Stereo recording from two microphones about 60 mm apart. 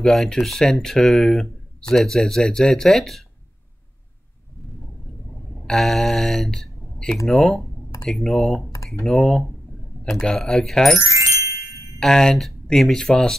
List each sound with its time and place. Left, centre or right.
0.0 s speech: centre
5.7 s speech: centre
11.0 s chime: left
12.0 s speech: centre